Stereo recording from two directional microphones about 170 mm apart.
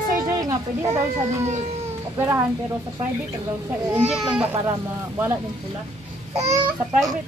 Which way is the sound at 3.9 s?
5° right (ahead or behind).